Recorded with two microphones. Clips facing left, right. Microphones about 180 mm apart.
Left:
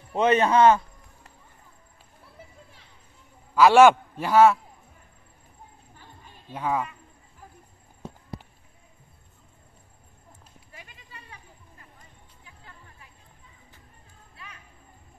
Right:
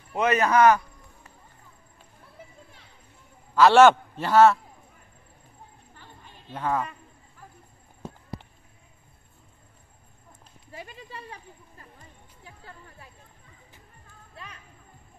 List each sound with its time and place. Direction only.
0.1 s a man's voice: 30° left (ahead or behind)
3.5 s a man's voice: 10° left (ahead or behind)
6.5 s a man's voice: 10° left (ahead or behind)
10.7 s clip-clop: 35° right (ahead or behind)